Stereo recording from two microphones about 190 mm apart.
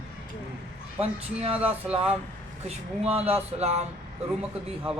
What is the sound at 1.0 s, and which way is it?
Speech, 35° right (ahead or behind).